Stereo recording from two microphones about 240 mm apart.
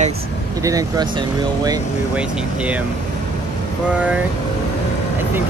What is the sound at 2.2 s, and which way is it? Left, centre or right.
Speech, centre.